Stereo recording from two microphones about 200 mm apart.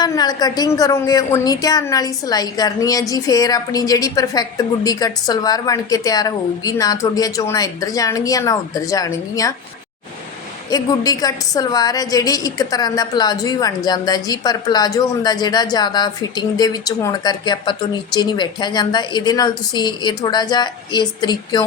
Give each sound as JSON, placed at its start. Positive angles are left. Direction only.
{"t": 0.0, "sound": "a woman's voice", "side_deg": 20}
{"t": 10.7, "sound": "a woman's voice", "side_deg": 20}